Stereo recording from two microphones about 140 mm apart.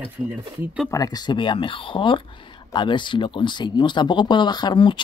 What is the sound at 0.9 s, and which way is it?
Speech, 30° left (ahead or behind).